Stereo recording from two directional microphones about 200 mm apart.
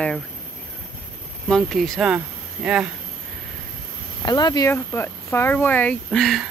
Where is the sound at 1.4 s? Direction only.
Centre (ahead or behind).